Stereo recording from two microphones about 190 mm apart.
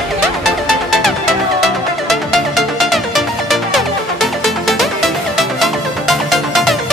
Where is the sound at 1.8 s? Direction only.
Centre (ahead or behind).